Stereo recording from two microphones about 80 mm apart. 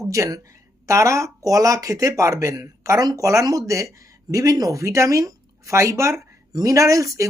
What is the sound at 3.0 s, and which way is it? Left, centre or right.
Speech, right.